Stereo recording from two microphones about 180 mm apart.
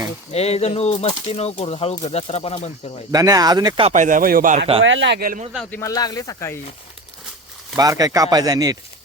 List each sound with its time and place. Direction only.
0.3 s speech: 35° left (ahead or behind)
3.1 s speech: 20° right (ahead or behind)
3.8 s speech: 45° right (ahead or behind)
4.8 s a man's voice: 90° right
5.2 s speech: 50° right (ahead or behind)
5.7 s speech: 20° left (ahead or behind)
7.8 s speech: 20° right (ahead or behind)